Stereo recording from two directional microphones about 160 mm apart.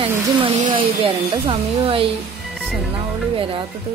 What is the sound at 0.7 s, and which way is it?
Speech, 35° right (ahead or behind).